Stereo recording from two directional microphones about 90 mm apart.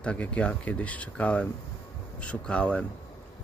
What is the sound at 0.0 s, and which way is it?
Speech, 15° left (ahead or behind).